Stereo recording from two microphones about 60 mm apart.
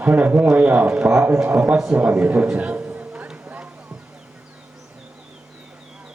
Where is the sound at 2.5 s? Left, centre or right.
Right.